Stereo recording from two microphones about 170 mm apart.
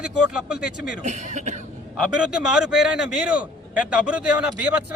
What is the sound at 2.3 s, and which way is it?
A man's voice, 5° right (ahead or behind).